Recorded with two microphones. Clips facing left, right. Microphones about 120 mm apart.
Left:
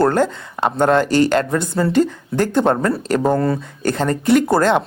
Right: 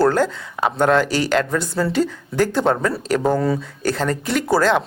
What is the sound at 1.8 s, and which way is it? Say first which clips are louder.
Speech: left 2 dB; 5° left (ahead or behind).